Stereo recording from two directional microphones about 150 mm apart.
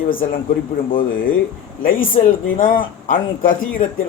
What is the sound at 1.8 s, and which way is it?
Speech, 70° left (ahead or behind).